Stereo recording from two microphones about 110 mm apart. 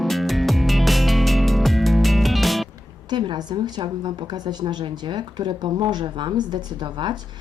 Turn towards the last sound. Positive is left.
turn(degrees=-45)  # may be behind; listen again after turning